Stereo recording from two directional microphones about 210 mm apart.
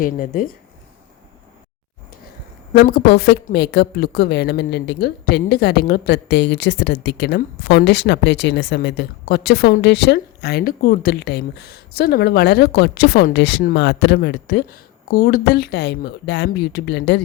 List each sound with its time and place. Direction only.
0.0 s speech: 40° left (ahead or behind)
2.8 s speech: 50° left (ahead or behind)